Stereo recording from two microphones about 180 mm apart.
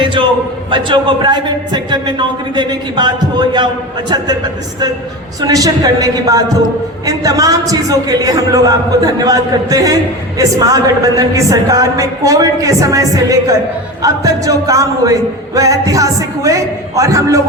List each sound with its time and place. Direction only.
0.0 s a sound: 30° right (ahead or behind)
0.7 s a man's voice: 25° right (ahead or behind)
5.4 s a man's voice: 20° right (ahead or behind)